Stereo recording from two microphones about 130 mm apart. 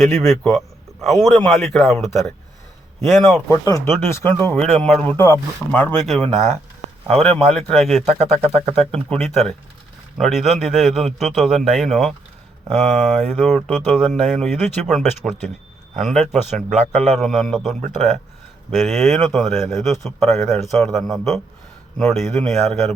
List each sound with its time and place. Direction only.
0.0 s speech: 5° left (ahead or behind)
3.3 s speech: 25° left (ahead or behind); by 5.1 s 10° left (ahead or behind)
5.1 s speech: 20° left (ahead or behind)
6.1 s speech: 5° left (ahead or behind)
12.7 s speech: 60° right (ahead or behind)
13.1 s speech: 5° right (ahead or behind)
16.6 s a man's voice: 80° right
17.0 s speech: centre (ahead or behind)